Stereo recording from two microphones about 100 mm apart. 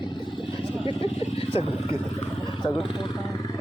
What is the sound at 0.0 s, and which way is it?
Vehicle, 50° left (ahead or behind).